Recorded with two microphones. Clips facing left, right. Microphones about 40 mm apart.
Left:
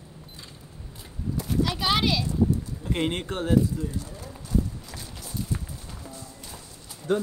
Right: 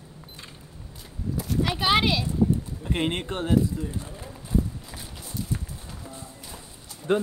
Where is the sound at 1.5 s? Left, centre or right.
Right.